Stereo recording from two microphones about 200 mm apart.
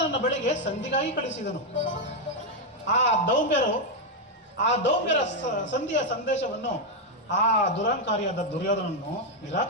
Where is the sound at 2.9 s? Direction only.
35° left (ahead or behind).